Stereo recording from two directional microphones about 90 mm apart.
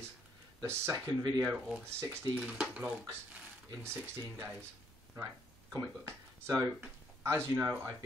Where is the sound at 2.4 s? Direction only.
10° right (ahead or behind).